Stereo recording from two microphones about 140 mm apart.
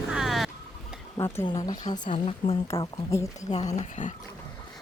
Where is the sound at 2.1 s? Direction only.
40° left (ahead or behind).